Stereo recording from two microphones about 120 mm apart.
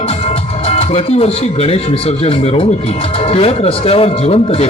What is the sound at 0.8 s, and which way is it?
Speech, 55° left (ahead or behind).